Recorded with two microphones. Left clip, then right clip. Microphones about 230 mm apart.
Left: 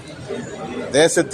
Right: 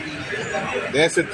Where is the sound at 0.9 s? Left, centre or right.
Left.